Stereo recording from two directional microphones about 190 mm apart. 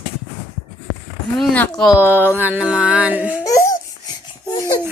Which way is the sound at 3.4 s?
15° left (ahead or behind).